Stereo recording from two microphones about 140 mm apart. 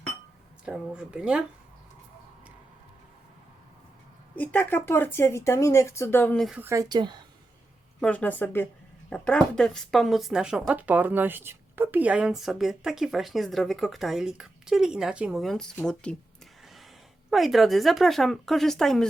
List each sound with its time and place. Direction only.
0.6 s speech: 5° right (ahead or behind)
4.4 s speech: 15° left (ahead or behind)
6.3 s speech: centre (ahead or behind)
6.6 s speech: 20° right (ahead or behind)
6.8 s a woman's voice: 30° right (ahead or behind)
8.0 s speech: 10° left (ahead or behind)
17.3 s speech: centre (ahead or behind)